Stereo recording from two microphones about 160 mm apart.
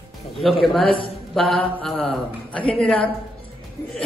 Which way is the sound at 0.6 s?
Centre (ahead or behind).